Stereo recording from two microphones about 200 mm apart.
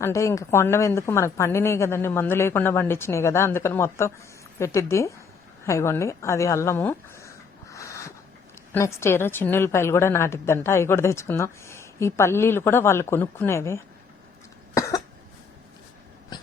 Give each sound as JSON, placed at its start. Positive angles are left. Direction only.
{"t": 0.0, "sound": "a woman's voice", "side_deg": 15}
{"t": 7.7, "sound": "a sound", "side_deg": 15}
{"t": 8.7, "sound": "a woman's voice", "side_deg": 10}
{"t": 14.8, "sound": "cough", "side_deg": 15}